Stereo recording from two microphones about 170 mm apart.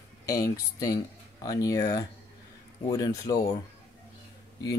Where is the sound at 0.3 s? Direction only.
20° left (ahead or behind).